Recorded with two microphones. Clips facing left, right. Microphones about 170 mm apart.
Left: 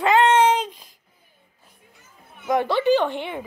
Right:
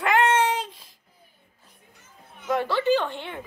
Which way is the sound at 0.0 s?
20° left (ahead or behind).